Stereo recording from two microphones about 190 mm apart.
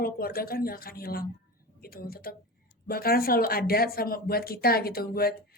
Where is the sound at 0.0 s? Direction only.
50° left (ahead or behind).